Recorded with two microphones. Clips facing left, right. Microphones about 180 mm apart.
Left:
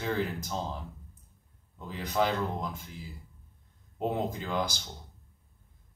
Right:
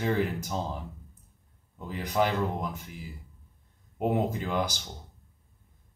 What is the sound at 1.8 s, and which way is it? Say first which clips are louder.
Speech: right 2 dB; 15° right (ahead or behind).